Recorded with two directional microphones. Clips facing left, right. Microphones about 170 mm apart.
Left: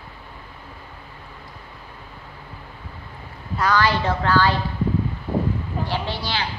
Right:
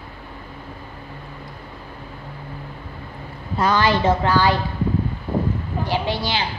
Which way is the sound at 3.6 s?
20° right (ahead or behind).